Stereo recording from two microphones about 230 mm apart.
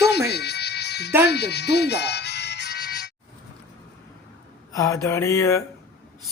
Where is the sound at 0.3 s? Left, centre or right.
Left.